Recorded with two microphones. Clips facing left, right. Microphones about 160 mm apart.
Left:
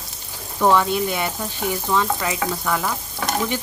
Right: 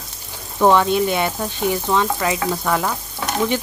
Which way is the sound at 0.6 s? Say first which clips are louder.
Right 3 dB; 25° right (ahead or behind).